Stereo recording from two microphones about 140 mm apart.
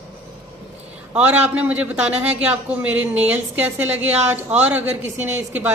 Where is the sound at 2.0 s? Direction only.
50° right (ahead or behind).